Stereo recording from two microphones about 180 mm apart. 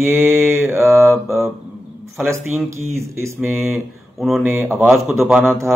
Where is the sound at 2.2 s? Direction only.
15° right (ahead or behind).